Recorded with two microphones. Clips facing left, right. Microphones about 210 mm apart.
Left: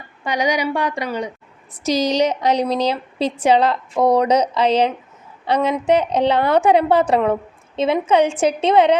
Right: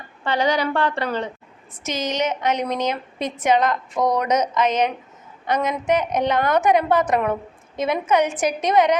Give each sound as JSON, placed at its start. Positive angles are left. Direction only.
{"t": 0.3, "sound": "a woman's voice", "side_deg": 15}
{"t": 1.8, "sound": "a woman's voice", "side_deg": 35}